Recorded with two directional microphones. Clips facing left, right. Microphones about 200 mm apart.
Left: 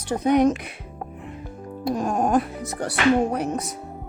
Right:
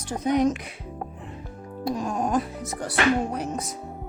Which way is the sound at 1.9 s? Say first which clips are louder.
Left 5 dB; 55° left (ahead or behind).